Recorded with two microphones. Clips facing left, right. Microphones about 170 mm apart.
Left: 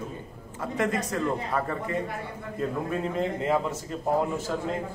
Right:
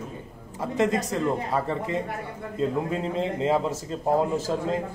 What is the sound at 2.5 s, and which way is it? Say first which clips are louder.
A man's voice: right 3 dB; 25° right (ahead or behind).